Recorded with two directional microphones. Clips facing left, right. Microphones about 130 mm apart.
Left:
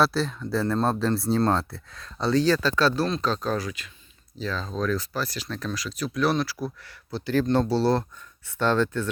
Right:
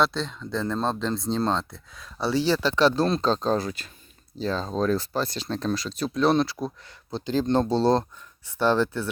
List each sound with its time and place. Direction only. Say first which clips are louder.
0.0 s speech: left 2 dB; 5° left (ahead or behind); by 3.1 s 20° right (ahead or behind)
3.1 s speech: right 3 dB; 30° right (ahead or behind); by 9.0 s 10° right (ahead or behind)